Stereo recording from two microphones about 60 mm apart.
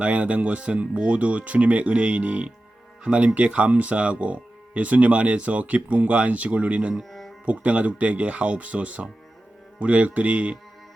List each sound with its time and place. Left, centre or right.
0.0 s speech: right
7.0 s music: centre
7.4 s speech: right